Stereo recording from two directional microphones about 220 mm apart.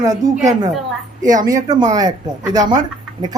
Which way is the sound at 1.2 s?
35° right (ahead or behind).